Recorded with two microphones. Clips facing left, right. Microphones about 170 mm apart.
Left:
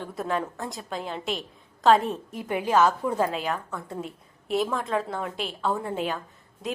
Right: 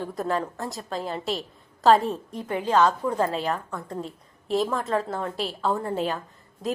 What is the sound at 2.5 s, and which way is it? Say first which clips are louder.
A woman's voice: even; 15° left (ahead or behind).